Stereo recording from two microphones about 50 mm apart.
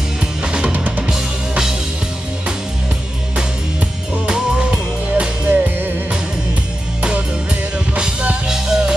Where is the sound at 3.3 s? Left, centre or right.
Centre.